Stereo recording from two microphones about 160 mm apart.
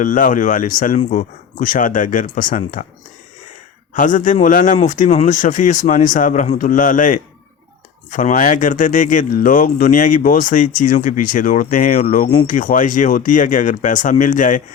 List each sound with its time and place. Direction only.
0.0 s speech: 55° left (ahead or behind)
3.9 s speech: 55° left (ahead or behind)